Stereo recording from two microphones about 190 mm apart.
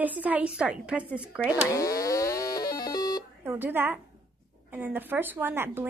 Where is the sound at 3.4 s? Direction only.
10° right (ahead or behind).